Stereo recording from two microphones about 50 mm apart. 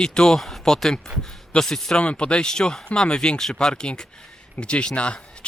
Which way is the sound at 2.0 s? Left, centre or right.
Left.